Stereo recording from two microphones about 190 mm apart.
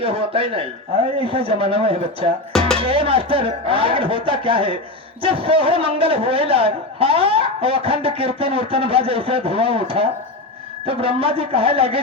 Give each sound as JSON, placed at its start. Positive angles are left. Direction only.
{"t": 0.0, "sound": "a man's voice", "side_deg": -30}
{"t": 2.5, "sound": "speech", "side_deg": 5}
{"t": 2.7, "sound": "a man's voice", "side_deg": -30}